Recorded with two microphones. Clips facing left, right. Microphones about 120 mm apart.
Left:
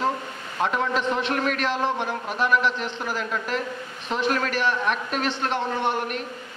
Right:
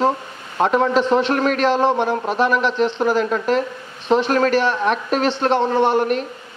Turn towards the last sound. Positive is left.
turn(degrees=-30)  # may be behind; listen again after turning